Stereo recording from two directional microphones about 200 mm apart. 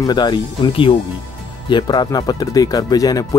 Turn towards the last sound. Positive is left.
turn(degrees=20)  # may be behind; listen again after turning